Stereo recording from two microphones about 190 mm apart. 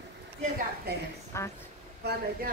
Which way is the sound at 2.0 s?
55° right (ahead or behind).